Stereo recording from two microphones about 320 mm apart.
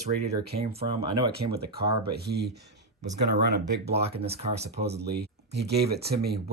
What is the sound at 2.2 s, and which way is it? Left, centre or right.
Speech, right.